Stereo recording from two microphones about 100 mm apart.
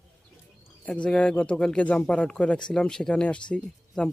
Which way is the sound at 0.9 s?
10° left (ahead or behind).